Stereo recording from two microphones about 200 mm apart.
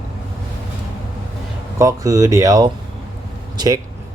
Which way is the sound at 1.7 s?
15° right (ahead or behind).